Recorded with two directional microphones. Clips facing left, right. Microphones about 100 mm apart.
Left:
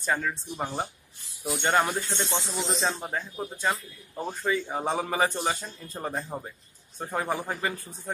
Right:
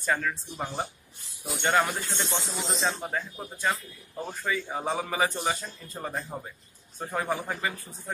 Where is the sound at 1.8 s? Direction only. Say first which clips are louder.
Left 2 dB; 25° left (ahead or behind).